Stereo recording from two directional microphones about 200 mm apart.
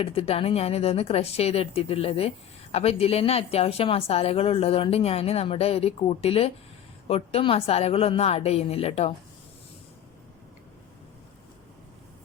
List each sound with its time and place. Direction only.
0.0 s speech: 30° left (ahead or behind)